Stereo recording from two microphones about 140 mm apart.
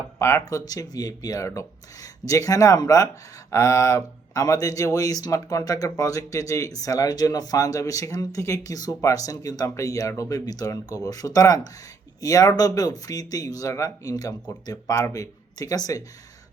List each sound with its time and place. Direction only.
0.2 s speech: 20° left (ahead or behind)